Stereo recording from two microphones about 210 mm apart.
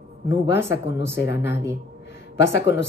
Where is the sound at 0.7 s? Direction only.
55° left (ahead or behind).